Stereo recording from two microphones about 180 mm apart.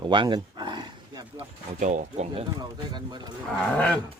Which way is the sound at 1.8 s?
40° right (ahead or behind).